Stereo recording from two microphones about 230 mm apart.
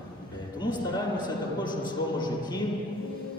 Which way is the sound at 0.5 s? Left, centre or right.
Centre.